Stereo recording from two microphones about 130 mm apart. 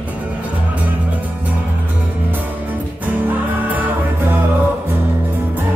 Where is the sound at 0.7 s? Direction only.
10° right (ahead or behind).